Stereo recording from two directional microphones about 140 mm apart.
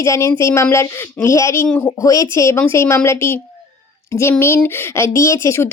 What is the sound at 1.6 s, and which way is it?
Speech, 10° left (ahead or behind).